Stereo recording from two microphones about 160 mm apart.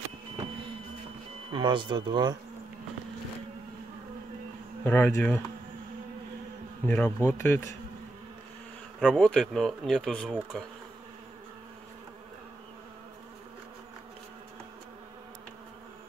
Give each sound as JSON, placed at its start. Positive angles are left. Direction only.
{"t": 1.5, "sound": "speech", "side_deg": -30}
{"t": 4.8, "sound": "speech", "side_deg": 15}
{"t": 6.9, "sound": "speech", "side_deg": 10}
{"t": 9.0, "sound": "speech", "side_deg": 5}